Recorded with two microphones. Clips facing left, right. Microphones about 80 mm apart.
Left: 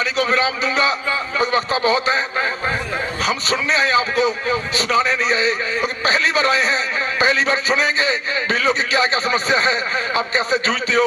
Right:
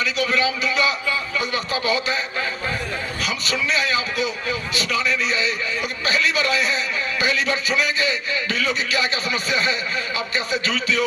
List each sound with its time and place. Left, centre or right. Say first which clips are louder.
0.0 s a man's voice: left 3 dB; left
1.4 s a sound: left 6 dB; left
3.2 s a man's voice: left 4 dB; left